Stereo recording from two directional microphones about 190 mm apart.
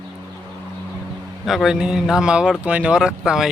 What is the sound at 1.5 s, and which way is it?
Speech, centre (ahead or behind).